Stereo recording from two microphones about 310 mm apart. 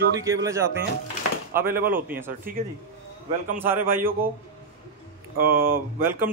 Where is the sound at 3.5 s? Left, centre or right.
Centre.